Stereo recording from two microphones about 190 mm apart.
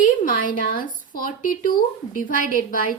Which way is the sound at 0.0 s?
45° left (ahead or behind).